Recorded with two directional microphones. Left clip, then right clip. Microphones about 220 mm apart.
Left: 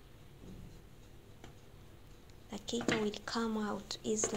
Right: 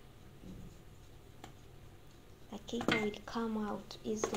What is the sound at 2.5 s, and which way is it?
A woman's voice, 25° left (ahead or behind).